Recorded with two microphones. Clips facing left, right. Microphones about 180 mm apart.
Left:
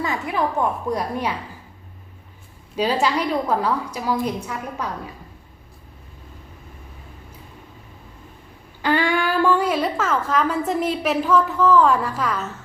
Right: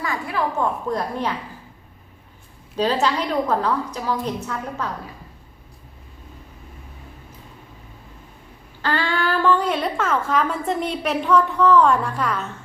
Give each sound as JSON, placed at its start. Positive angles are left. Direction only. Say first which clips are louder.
{"t": 0.0, "sound": "a woman's voice", "louder": "left 2 dB", "side_deg": 20}
{"t": 2.7, "sound": "a woman's voice", "louder": "even", "side_deg": 10}
{"t": 8.8, "sound": "speech", "louder": "left 3 dB", "side_deg": 15}